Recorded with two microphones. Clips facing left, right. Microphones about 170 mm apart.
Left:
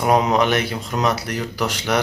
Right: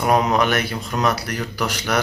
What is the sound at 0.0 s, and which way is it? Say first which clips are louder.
Speech: left 1 dB; 20° left (ahead or behind).